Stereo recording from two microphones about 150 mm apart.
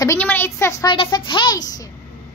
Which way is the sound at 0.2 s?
15° left (ahead or behind).